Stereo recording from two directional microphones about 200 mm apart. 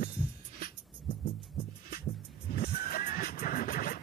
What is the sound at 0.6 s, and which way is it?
Music, 45° left (ahead or behind).